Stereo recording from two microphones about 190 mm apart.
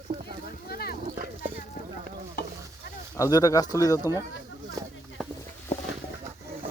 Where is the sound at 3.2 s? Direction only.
20° left (ahead or behind).